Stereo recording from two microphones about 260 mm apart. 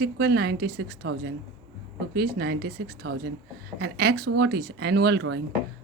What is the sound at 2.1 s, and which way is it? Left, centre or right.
A woman's voice, right.